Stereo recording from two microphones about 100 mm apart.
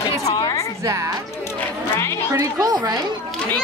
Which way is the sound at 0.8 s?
30° right (ahead or behind).